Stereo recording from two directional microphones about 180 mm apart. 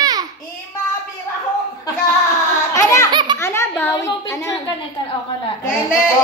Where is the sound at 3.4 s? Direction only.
15° left (ahead or behind).